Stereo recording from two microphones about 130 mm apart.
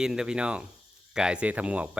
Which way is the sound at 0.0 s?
5° right (ahead or behind).